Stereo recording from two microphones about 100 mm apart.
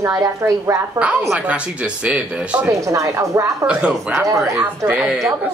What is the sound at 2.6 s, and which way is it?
A woman's voice, 30° right (ahead or behind).